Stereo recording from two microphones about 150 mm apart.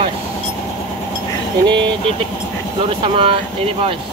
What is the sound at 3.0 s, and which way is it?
Speech, 40° right (ahead or behind).